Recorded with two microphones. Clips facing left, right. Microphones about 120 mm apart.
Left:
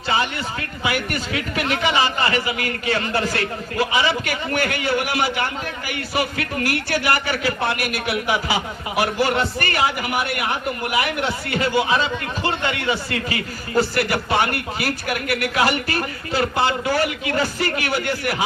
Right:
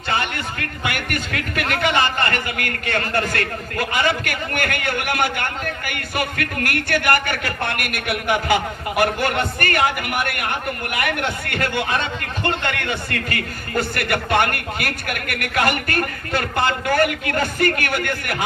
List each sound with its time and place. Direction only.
0.1 s a man's voice: 55° right (ahead or behind)